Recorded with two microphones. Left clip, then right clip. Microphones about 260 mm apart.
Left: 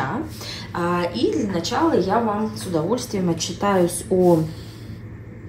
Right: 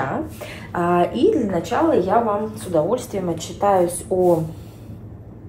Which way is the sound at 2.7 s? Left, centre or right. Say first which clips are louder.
Right 4 dB; left.